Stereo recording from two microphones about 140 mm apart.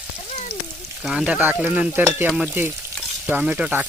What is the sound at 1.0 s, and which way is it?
Frying, 5° right (ahead or behind).